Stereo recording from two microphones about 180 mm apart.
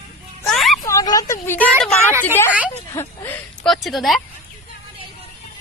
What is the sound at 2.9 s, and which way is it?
Speech, 10° left (ahead or behind).